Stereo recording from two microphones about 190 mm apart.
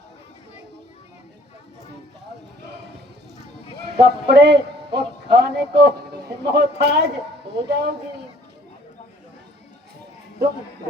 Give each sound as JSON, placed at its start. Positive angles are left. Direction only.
{"t": 3.9, "sound": "music", "side_deg": -60}